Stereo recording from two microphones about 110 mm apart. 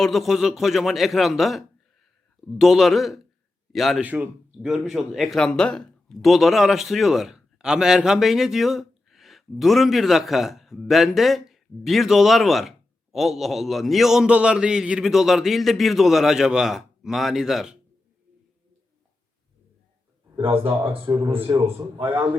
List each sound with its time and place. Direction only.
0.0 s a man's voice: centre (ahead or behind)
4.0 s speech: 15° right (ahead or behind)
4.6 s speech: centre (ahead or behind)
20.4 s speech: 55° right (ahead or behind)
21.5 s a man's voice: 30° right (ahead or behind)
21.9 s a man's voice: 45° right (ahead or behind)